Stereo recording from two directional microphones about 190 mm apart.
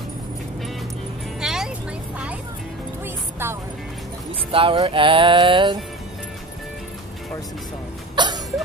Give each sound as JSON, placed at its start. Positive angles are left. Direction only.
{"t": 1.4, "sound": "music", "side_deg": -5}
{"t": 4.5, "sound": "music", "side_deg": -25}
{"t": 8.2, "sound": "a sound", "side_deg": -20}